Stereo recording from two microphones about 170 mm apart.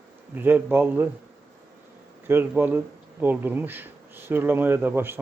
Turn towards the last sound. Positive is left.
turn(degrees=-10)  # may be behind; listen again after turning